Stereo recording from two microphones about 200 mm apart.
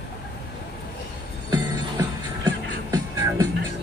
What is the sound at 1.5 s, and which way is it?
Music, 20° right (ahead or behind).